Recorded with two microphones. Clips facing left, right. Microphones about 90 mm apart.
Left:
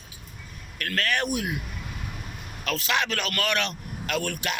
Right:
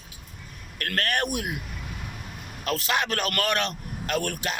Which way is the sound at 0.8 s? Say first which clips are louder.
Even; 50° right (ahead or behind).